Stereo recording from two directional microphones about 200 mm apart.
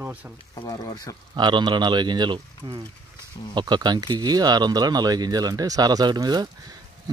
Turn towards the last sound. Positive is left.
turn(degrees=-20)  # may be behind; listen again after turning